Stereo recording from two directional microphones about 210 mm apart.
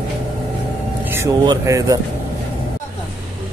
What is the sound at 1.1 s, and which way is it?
Speech, 15° right (ahead or behind).